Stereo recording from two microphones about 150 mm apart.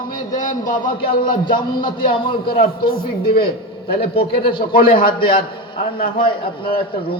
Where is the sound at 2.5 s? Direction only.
75° left (ahead or behind).